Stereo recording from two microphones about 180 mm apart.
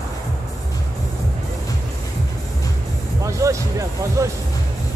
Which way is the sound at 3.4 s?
15° right (ahead or behind).